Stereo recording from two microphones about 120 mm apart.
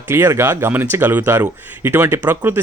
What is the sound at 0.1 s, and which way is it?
Speech, 20° right (ahead or behind).